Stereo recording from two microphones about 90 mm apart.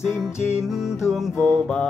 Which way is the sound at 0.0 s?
5° right (ahead or behind).